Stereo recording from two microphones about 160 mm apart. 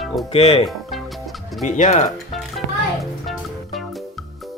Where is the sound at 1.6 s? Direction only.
50° left (ahead or behind).